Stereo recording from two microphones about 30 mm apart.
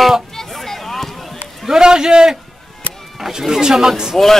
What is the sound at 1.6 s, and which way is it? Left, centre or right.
Speech, right.